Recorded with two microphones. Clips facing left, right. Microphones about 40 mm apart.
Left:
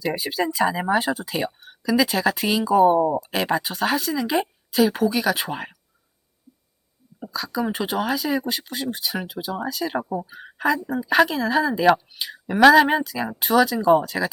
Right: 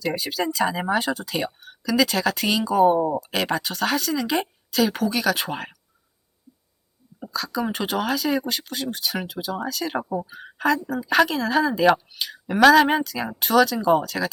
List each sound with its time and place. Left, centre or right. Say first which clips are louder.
0.0 s speech: left 1 dB; centre
0.5 s speech: left 2 dB; centre
7.3 s speech: left 1 dB; centre